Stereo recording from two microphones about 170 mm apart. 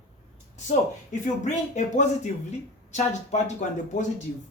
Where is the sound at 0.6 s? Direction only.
45° left (ahead or behind).